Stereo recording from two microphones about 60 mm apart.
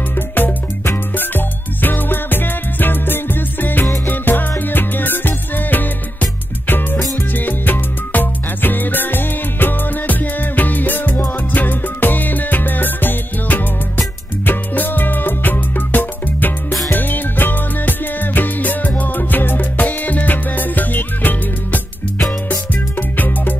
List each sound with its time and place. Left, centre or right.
0.3 s music: left
7.3 s music: left